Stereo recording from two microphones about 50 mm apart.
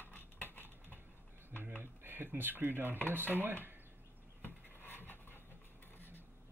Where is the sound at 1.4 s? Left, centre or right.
Right.